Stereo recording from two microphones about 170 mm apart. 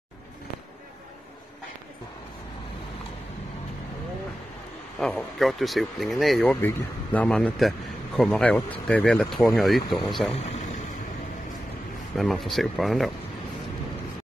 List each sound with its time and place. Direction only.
4.9 s speech: centre (ahead or behind)
10.3 s vehicle: 40° left (ahead or behind)
12.2 s speech: centre (ahead or behind)